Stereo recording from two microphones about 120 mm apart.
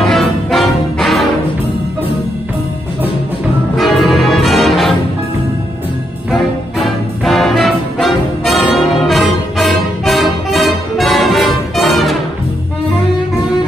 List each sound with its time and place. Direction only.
0.0 s music: centre (ahead or behind)
3.7 s music: centre (ahead or behind)
6.3 s music: centre (ahead or behind)